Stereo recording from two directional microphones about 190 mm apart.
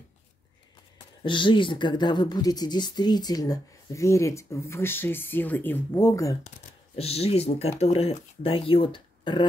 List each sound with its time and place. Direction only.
1.2 s speech: 25° left (ahead or behind)
7.0 s speech: 30° left (ahead or behind)